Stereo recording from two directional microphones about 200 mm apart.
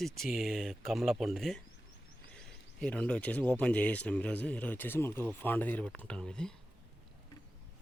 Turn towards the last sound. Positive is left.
turn(degrees=5)  # may be behind; listen again after turning